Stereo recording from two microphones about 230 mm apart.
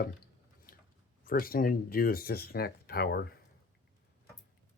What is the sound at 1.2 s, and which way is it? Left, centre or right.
Speech, left.